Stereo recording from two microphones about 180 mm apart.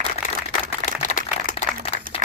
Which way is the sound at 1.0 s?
45° left (ahead or behind).